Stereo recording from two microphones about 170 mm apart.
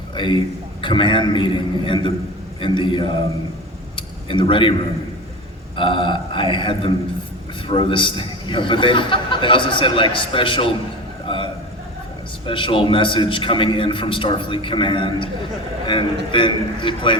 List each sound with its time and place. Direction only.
0.2 s a man's voice: 30° left (ahead or behind)
3.9 s a sound: 30° left (ahead or behind)
5.7 s a man's voice: 30° left (ahead or behind)
12.5 s a man's voice: 30° left (ahead or behind)
16.3 s a man's voice: 30° left (ahead or behind)